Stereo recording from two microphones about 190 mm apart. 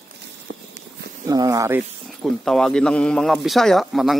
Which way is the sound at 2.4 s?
Centre (ahead or behind).